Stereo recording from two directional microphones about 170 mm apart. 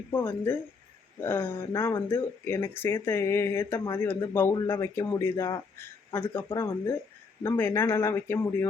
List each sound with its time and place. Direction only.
0.1 s speech: 10° left (ahead or behind)